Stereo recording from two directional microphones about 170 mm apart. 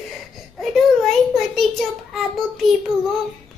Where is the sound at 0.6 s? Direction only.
Centre (ahead or behind).